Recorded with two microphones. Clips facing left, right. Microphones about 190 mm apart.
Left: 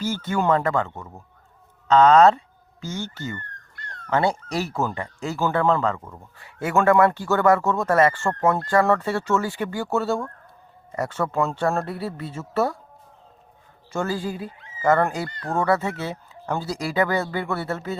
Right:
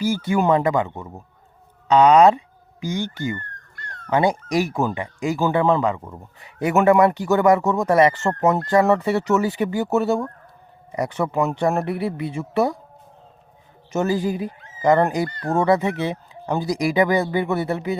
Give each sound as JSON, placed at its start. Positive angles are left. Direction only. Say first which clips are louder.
{"t": 0.0, "sound": "speech", "louder": "right 4 dB", "side_deg": -10}
{"t": 13.9, "sound": "speech", "louder": "right 5 dB", "side_deg": -20}